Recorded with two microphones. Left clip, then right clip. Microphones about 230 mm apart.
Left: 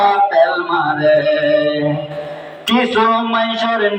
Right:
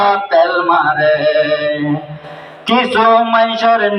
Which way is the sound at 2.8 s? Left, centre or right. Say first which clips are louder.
Right 4 dB; right.